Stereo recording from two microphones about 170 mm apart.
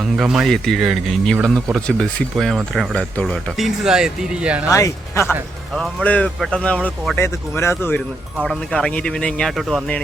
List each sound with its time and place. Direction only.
0.0 s speech: centre (ahead or behind)
4.7 s speech: 15° left (ahead or behind)
5.3 s speech: centre (ahead or behind)
7.2 s speech: 15° left (ahead or behind)
8.4 s speech: centre (ahead or behind)